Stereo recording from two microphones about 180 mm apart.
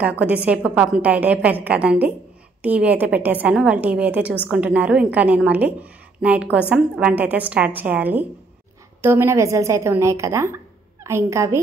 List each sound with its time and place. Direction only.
0.0 s a woman's voice: 10° right (ahead or behind)